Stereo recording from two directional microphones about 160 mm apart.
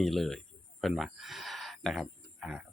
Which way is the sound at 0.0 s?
Centre (ahead or behind).